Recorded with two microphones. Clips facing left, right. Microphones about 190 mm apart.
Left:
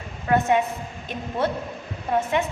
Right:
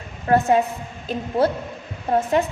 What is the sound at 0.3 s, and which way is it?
Speech, 35° right (ahead or behind).